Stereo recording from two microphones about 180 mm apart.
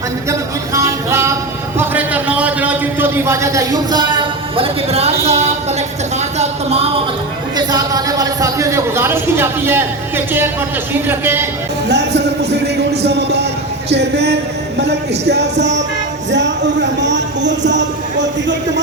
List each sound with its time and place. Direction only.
0.3 s a sound: 15° right (ahead or behind); by 5.5 s 35° right (ahead or behind)
7.5 s a man's voice: 20° right (ahead or behind)
11.9 s music: 70° right (ahead or behind)
16.3 s speech: 80° right